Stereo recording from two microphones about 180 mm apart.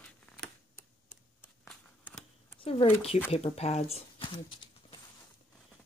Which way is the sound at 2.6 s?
30° left (ahead or behind).